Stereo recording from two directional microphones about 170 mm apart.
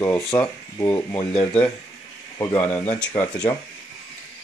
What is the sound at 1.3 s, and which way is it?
Speech, 5° left (ahead or behind).